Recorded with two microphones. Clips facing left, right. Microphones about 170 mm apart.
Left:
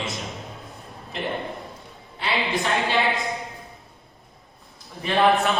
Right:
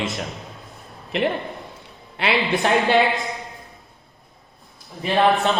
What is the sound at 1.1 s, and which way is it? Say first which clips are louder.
A man's voice: right 6 dB; 70° right (ahead or behind).